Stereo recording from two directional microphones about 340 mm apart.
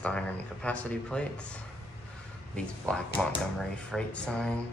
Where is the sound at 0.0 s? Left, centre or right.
Centre.